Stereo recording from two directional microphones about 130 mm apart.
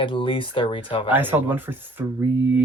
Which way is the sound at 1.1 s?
15° right (ahead or behind).